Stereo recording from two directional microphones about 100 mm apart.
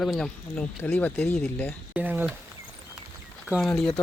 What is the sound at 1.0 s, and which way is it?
Speech, 20° left (ahead or behind).